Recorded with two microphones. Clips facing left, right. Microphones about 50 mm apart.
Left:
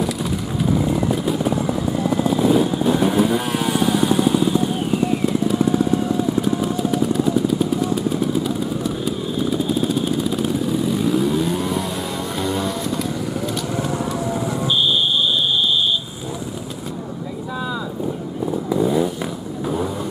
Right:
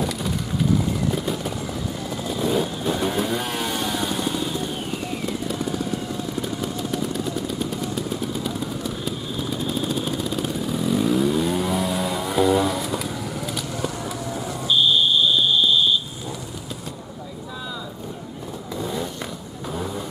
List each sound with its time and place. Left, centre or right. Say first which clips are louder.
0.7 s vehicle: left 5 dB; centre
1.1 s vehicle: left 5 dB; centre
1.5 s vehicle: left 8 dB; left
2.3 s vehicle: left 4 dB; centre
6.4 s vehicle: left 7 dB; centre
18.7 s vehicle: left 9 dB; centre